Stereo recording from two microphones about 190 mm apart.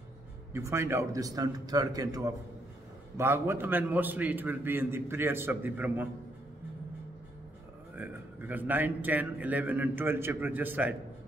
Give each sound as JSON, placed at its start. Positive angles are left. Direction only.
{"t": 0.5, "sound": "a man's voice", "side_deg": -15}
{"t": 8.0, "sound": "a man's voice", "side_deg": -10}